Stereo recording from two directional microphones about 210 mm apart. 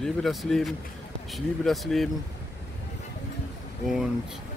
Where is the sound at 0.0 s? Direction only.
Centre (ahead or behind).